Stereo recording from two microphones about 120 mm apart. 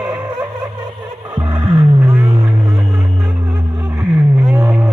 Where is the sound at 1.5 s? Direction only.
35° right (ahead or behind).